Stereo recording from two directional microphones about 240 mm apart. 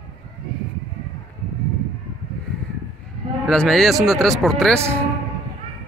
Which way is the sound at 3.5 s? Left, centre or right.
Centre.